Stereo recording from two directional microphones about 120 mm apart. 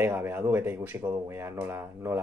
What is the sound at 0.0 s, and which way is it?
Speech, 20° right (ahead or behind).